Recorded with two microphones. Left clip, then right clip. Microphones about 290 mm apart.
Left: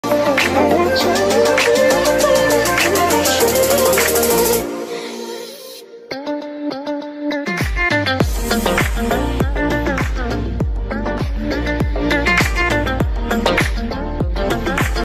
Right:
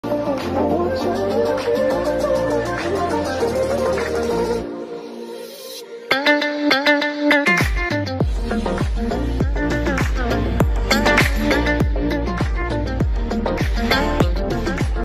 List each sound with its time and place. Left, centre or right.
0.1 s music: left
6.0 s music: right
7.8 s music: centre
8.2 s music: left
9.4 s music: centre
10.9 s music: right
11.4 s music: centre
12.3 s music: left
12.8 s music: left
13.9 s music: right